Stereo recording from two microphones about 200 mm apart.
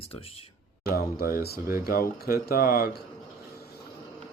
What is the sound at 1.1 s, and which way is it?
Speech, 50° left (ahead or behind).